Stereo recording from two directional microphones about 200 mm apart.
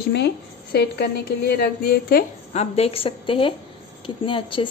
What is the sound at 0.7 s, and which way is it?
A woman's voice, 55° left (ahead or behind).